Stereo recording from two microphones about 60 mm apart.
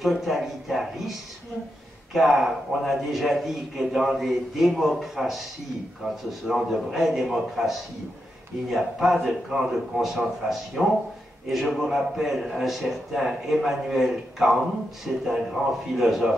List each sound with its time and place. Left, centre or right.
0.0 s a man's voice: centre
2.1 s a man's voice: centre